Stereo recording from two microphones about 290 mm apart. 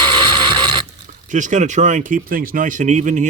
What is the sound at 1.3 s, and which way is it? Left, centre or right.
Speech, right.